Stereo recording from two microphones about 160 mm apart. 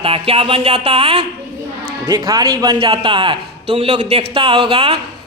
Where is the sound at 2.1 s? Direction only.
20° right (ahead or behind).